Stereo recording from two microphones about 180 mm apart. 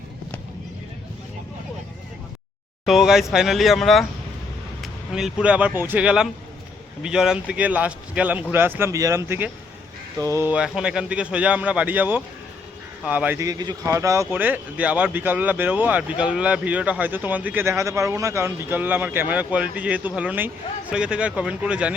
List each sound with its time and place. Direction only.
2.8 s speech: centre (ahead or behind)